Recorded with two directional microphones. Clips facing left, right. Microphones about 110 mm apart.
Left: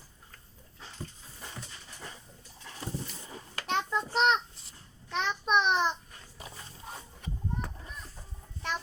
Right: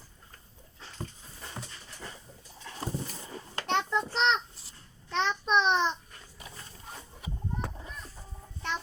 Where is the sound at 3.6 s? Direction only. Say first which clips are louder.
Right 2 dB; 30° right (ahead or behind).